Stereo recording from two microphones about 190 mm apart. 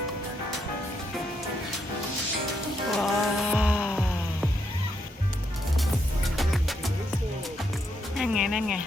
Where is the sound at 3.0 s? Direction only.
Centre (ahead or behind).